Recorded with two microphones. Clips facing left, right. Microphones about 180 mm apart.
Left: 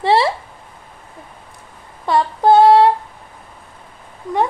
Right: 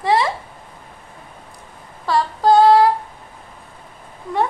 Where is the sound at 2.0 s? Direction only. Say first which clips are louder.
Left 2 dB; 25° left (ahead or behind).